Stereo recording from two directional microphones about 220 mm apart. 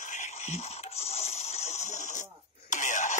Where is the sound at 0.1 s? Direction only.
30° left (ahead or behind).